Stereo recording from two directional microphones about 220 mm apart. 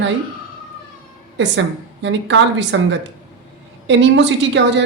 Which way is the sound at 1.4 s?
55° right (ahead or behind).